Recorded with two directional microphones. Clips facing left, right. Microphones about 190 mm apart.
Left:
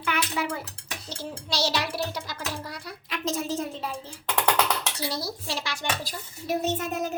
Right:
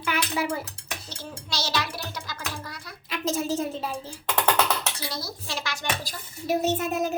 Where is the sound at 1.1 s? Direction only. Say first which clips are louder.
Left 4 dB; 35° left (ahead or behind).